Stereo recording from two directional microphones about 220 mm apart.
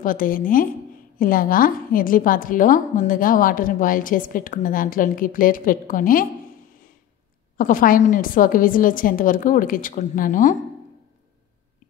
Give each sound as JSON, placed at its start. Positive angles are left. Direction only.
{"t": 0.0, "sound": "a woman's voice", "side_deg": 40}
{"t": 7.5, "sound": "a woman's voice", "side_deg": 40}